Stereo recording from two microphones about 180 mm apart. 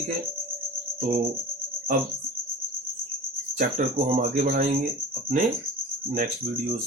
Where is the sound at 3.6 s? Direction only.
45° right (ahead or behind).